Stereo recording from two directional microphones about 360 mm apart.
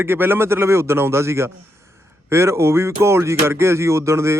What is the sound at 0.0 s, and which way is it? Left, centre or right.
Speech, centre.